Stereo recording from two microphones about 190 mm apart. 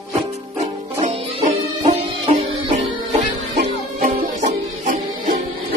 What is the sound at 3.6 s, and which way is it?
Music, 45° right (ahead or behind).